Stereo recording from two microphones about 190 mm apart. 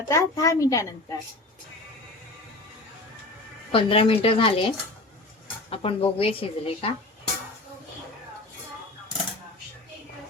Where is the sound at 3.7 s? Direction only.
25° left (ahead or behind).